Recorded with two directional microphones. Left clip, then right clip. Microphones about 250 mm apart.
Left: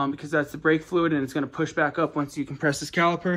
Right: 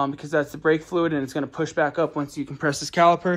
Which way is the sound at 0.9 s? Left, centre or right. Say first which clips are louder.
Even; centre.